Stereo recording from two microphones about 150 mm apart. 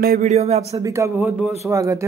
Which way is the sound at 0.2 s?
45° right (ahead or behind).